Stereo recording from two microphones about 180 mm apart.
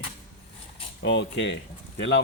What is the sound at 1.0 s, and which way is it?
Speech, 85° left.